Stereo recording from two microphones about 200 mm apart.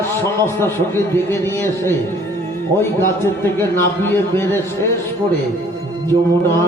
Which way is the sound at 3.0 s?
15° left (ahead or behind).